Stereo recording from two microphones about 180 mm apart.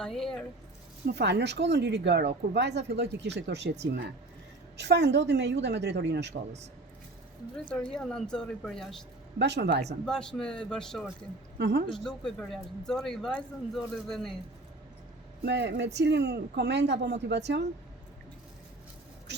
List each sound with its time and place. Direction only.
0.0 s speech: centre (ahead or behind)
1.0 s speech: 70° right (ahead or behind)
7.5 s speech: 5° left (ahead or behind)
9.4 s speech: 70° right (ahead or behind)
10.1 s speech: 5° left (ahead or behind)
11.5 s a woman's voice: 70° right (ahead or behind)
11.9 s speech: centre (ahead or behind)
15.4 s speech: 75° right (ahead or behind)